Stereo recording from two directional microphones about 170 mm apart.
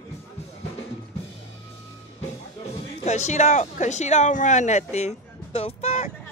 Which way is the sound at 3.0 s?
40° left (ahead or behind).